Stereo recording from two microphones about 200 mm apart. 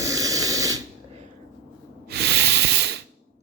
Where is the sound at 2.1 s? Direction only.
55° right (ahead or behind).